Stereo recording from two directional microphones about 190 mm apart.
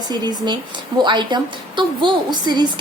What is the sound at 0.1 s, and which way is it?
A woman's voice, 20° right (ahead or behind).